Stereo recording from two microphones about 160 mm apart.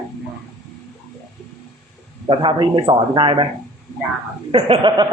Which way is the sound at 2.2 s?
35° right (ahead or behind).